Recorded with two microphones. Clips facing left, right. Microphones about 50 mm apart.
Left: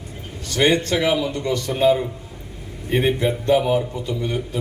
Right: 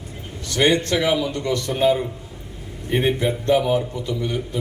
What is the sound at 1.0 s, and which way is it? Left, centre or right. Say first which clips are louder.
Speech: even; left.